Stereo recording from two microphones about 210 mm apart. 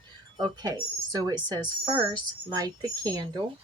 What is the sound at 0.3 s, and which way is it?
Speech, 20° right (ahead or behind).